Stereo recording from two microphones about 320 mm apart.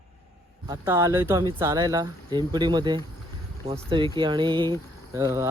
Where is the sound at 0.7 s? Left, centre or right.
Centre.